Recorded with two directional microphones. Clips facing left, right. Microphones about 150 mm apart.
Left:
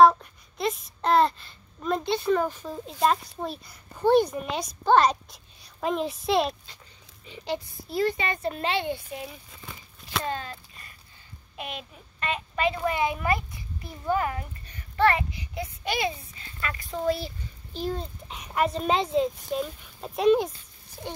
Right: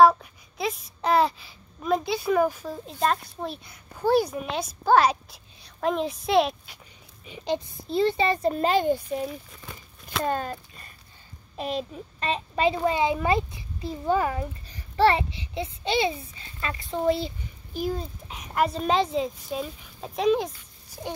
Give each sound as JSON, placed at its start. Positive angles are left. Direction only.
{"t": 0.0, "sound": "a child's voice", "side_deg": -5}
{"t": 7.2, "sound": "speech", "side_deg": -20}
{"t": 11.5, "sound": "a child's voice", "side_deg": -35}
{"t": 17.7, "sound": "a child's voice", "side_deg": -5}